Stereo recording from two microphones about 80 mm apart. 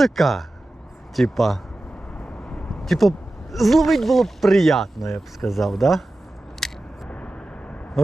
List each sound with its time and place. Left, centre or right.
0.0 s speech: centre
6.6 s biting: centre
7.1 s vehicle: centre